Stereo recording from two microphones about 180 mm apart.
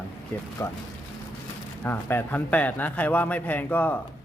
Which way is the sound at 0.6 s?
15° left (ahead or behind).